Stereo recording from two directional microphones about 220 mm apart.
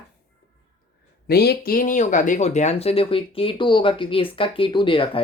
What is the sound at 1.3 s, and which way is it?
Speech, 45° left (ahead or behind).